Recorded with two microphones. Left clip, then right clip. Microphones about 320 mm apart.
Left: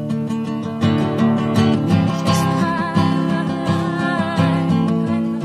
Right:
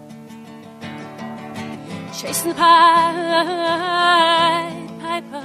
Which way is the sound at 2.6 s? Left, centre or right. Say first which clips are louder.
Right 10 dB; right.